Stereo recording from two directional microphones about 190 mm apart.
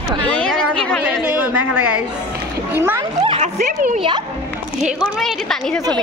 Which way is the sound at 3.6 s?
45° right (ahead or behind).